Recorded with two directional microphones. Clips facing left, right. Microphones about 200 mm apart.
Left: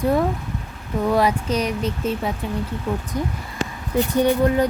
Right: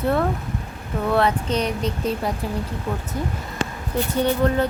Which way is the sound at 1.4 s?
30° right (ahead or behind).